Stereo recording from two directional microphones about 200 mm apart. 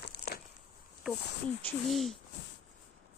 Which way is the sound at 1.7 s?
Centre (ahead or behind).